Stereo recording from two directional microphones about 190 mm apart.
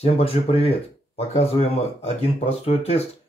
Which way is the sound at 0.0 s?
30° left (ahead or behind).